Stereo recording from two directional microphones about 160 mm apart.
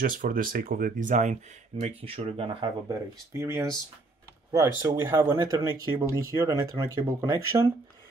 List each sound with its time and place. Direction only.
0.0 s speech: 60° right (ahead or behind)
1.8 s speech: 40° right (ahead or behind)
2.9 s speech: 20° right (ahead or behind)